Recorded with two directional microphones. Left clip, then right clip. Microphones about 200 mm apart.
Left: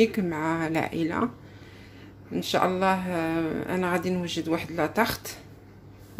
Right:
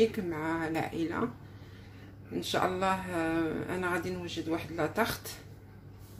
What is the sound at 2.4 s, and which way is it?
A woman's voice, 20° left (ahead or behind).